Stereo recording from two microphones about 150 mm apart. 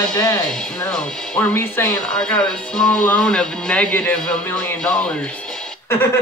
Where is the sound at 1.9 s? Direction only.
5° left (ahead or behind).